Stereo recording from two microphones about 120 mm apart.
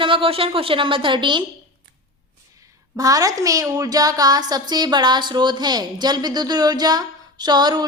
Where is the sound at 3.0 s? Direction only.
30° right (ahead or behind).